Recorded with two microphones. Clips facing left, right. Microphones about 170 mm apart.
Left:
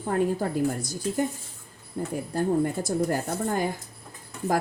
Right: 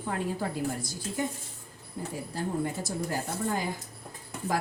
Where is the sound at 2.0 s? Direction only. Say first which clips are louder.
Left 7 dB; 55° left (ahead or behind).